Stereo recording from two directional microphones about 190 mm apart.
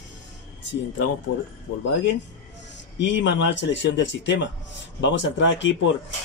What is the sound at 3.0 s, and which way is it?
Speech, 70° left (ahead or behind).